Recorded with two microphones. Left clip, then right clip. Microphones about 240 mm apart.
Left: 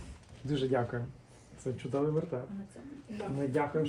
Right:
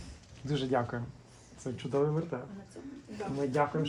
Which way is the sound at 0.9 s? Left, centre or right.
Right.